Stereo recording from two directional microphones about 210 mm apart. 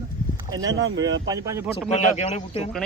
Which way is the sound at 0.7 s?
60° right (ahead or behind).